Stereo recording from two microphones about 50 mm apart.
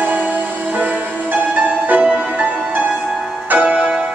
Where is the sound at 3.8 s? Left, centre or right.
Right.